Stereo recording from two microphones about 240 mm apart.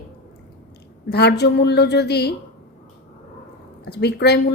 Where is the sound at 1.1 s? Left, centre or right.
Left.